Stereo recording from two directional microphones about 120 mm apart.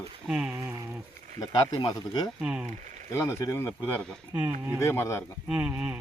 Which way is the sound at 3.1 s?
25° left (ahead or behind).